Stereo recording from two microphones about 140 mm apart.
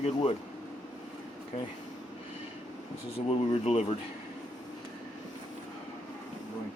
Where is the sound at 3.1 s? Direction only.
45° left (ahead or behind).